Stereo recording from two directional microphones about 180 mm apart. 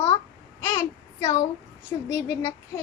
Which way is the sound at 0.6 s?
15° left (ahead or behind).